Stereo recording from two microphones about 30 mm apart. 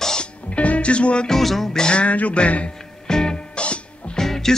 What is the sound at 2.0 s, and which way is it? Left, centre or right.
Music, left.